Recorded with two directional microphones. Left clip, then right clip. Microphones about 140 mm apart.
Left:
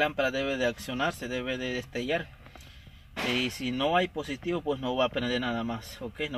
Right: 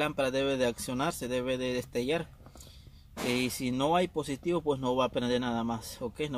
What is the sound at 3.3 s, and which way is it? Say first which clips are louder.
Speech: left 2 dB; 35° right (ahead or behind).